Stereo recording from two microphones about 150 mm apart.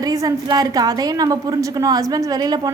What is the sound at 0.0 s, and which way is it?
A woman's voice, 25° right (ahead or behind).